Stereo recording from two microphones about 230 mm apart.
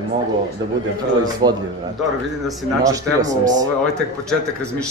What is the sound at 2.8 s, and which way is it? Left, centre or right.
Speech, centre.